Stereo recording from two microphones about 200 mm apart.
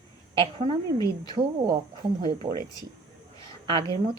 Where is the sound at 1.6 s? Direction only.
20° right (ahead or behind).